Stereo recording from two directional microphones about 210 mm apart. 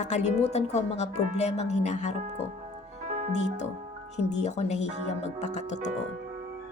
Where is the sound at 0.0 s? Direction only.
35° left (ahead or behind).